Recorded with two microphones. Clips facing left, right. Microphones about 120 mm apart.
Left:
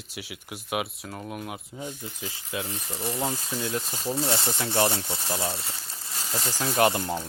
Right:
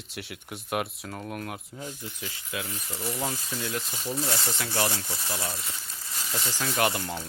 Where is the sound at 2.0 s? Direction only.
35° left (ahead or behind).